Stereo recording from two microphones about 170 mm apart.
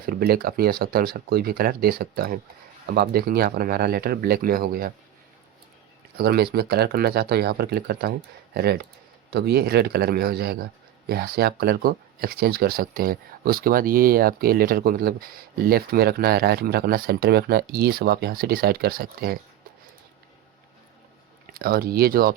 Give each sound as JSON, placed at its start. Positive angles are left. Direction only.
{"t": 0.0, "sound": "a man's voice", "side_deg": -60}
{"t": 6.1, "sound": "a man's voice", "side_deg": -65}
{"t": 21.5, "sound": "a man's voice", "side_deg": -60}